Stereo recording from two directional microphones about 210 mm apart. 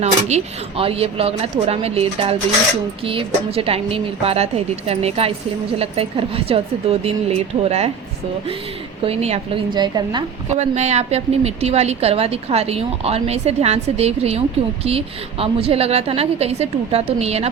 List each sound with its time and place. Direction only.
0.0 s a woman's voice: 30° right (ahead or behind)
9.0 s a woman's voice: 30° right (ahead or behind)
10.5 s a woman's voice: 30° right (ahead or behind)